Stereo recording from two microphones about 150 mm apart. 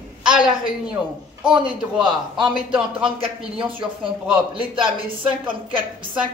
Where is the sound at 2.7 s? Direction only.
5° right (ahead or behind).